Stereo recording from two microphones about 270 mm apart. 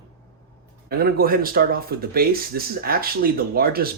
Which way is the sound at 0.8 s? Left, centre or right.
Right.